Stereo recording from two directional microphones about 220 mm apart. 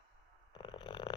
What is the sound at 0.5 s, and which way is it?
Snoring, 20° left (ahead or behind).